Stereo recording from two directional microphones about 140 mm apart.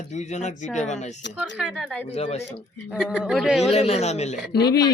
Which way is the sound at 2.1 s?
50° left (ahead or behind).